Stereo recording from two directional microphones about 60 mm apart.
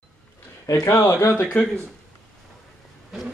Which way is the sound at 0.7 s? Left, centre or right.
Left.